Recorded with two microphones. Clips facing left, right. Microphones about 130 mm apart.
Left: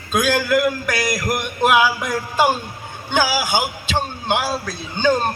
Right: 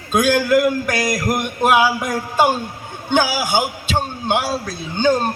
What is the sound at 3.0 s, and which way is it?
A man's voice, 45° right (ahead or behind).